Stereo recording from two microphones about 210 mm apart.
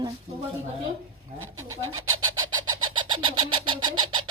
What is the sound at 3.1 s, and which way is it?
Bird, 20° right (ahead or behind).